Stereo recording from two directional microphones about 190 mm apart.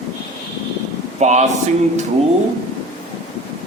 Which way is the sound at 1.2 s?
35° right (ahead or behind).